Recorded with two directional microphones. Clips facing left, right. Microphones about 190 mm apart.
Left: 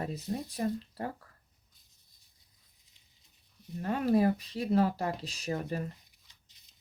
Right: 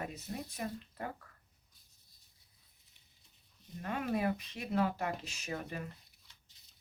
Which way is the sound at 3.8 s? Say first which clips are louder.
Left 8 dB; 35° left (ahead or behind).